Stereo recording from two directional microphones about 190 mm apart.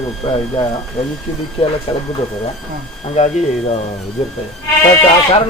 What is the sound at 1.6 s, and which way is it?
Speech, 30° left (ahead or behind).